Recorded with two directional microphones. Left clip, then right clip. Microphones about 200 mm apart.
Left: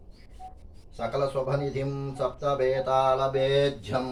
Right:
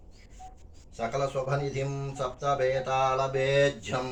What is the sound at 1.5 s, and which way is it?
Mantra, 15° right (ahead or behind).